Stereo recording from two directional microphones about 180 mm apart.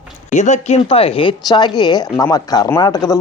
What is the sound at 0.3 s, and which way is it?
Speech, 40° left (ahead or behind).